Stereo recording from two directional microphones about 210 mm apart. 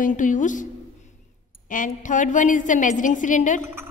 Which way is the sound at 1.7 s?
40° left (ahead or behind).